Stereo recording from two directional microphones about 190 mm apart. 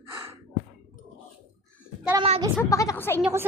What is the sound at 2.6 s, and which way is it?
Speech, 15° left (ahead or behind).